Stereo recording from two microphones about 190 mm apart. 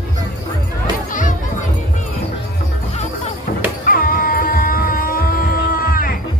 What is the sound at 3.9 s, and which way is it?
Music, 50° left (ahead or behind).